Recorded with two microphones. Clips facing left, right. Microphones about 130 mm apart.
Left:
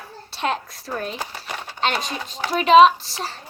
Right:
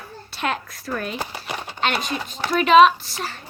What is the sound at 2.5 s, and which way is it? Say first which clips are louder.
Speech: left 1 dB; 35° left (ahead or behind).